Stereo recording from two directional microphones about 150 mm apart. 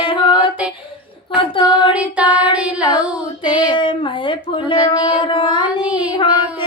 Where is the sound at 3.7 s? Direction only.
35° left (ahead or behind).